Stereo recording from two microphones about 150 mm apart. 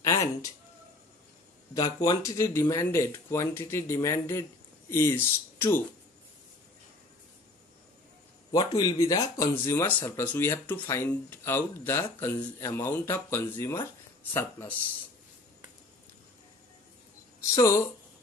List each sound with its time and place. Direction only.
1.7 s speech: 25° left (ahead or behind)
8.5 s speech: 30° left (ahead or behind); by 14.9 s 15° left (ahead or behind)
17.6 s speech: 20° left (ahead or behind)